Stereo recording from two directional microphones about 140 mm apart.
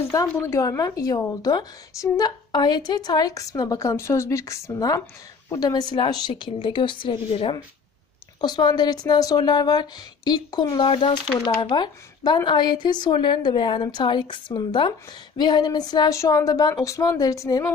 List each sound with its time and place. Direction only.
0.1 s a woman's voice: 20° left (ahead or behind)
10.8 s a woman's voice: 40° left (ahead or behind)